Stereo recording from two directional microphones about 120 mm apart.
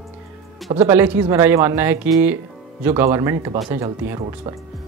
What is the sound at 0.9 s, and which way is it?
Speech, 15° right (ahead or behind).